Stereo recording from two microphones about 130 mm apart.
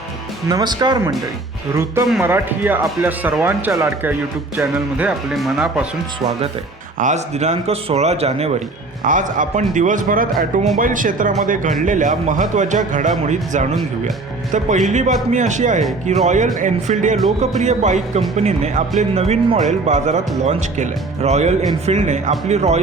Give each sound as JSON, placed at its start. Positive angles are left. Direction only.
{"t": 0.4, "sound": "speech", "side_deg": -30}
{"t": 2.2, "sound": "speech", "side_deg": -15}
{"t": 5.3, "sound": "speech", "side_deg": 0}
{"t": 7.0, "sound": "speech", "side_deg": -60}
{"t": 9.0, "sound": "speech", "side_deg": -85}
{"t": 14.8, "sound": "speech", "side_deg": -70}